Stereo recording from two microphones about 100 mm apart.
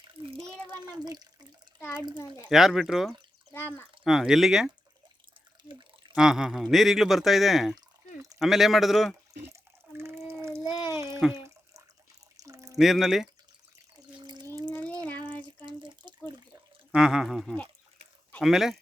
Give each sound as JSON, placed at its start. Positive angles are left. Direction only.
{"t": 0.0, "sound": "a sound", "side_deg": -60}
{"t": 0.7, "sound": "speech", "side_deg": -45}
{"t": 2.5, "sound": "speech", "side_deg": -5}
{"t": 6.1, "sound": "speech", "side_deg": -5}
{"t": 7.8, "sound": "drip", "side_deg": -35}
{"t": 8.4, "sound": "speech", "side_deg": -5}
{"t": 10.0, "sound": "a sound", "side_deg": -25}
{"t": 12.4, "sound": "pour", "side_deg": -35}
{"t": 12.7, "sound": "speech", "side_deg": -5}
{"t": 14.2, "sound": "a sound", "side_deg": -50}
{"t": 14.4, "sound": "water", "side_deg": -35}
{"t": 14.8, "sound": "water", "side_deg": 15}
{"t": 15.6, "sound": "drip", "side_deg": -50}
{"t": 16.9, "sound": "speech", "side_deg": -5}